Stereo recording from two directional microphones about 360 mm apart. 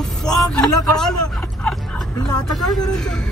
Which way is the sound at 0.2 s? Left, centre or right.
Centre.